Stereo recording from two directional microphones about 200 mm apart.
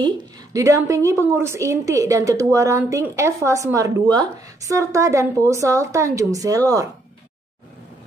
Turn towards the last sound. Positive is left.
turn(degrees=-15)  # may be behind; listen again after turning